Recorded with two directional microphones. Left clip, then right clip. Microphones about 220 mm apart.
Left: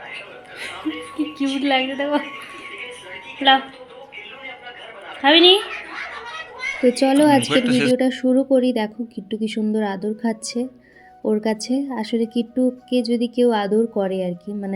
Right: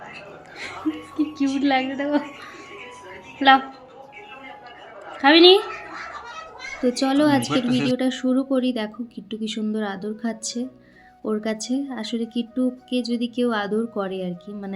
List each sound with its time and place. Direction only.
1.1 s a woman's voice: centre (ahead or behind)
5.2 s a woman's voice: 10° right (ahead or behind)
6.8 s a woman's voice: 10° left (ahead or behind)